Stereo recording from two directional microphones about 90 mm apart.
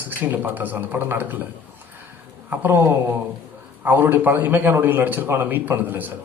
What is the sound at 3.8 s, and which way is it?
A man's voice, 20° right (ahead or behind).